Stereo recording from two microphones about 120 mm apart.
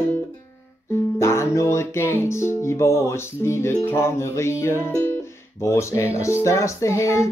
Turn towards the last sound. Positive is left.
turn(degrees=25)  # may be behind; listen again after turning